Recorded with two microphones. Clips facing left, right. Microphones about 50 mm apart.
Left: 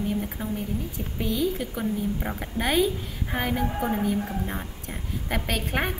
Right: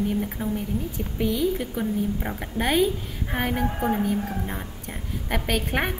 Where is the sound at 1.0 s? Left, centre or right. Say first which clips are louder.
Right 3 dB; centre.